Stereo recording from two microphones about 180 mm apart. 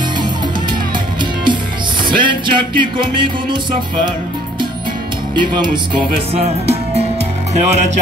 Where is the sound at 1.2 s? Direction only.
25° right (ahead or behind).